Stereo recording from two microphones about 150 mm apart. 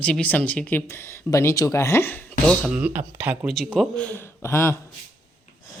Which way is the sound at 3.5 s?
Centre (ahead or behind).